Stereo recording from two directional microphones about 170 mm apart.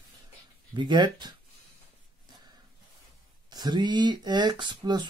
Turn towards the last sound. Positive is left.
turn(degrees=-25)  # may be behind; listen again after turning